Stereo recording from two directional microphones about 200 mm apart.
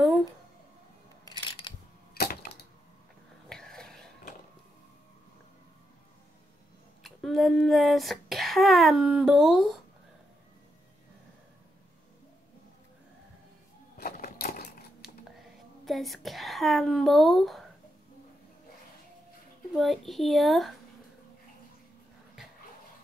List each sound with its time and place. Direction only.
2.1 s typewriter: 50° left (ahead or behind)
3.4 s whispering: 5° left (ahead or behind)
7.0 s speech: centre (ahead or behind)
13.9 s crushing: 50° left (ahead or behind)
15.8 s speech: centre (ahead or behind)
19.7 s speech: centre (ahead or behind)